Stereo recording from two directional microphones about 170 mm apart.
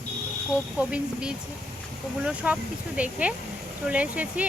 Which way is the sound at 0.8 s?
10° right (ahead or behind).